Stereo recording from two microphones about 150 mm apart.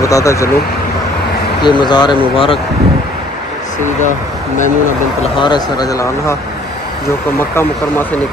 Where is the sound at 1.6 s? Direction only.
30° left (ahead or behind).